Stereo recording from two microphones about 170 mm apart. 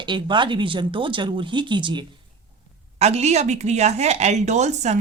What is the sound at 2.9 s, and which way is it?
Speech, 40° right (ahead or behind).